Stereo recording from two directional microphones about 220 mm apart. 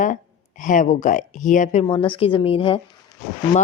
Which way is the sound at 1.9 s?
25° left (ahead or behind).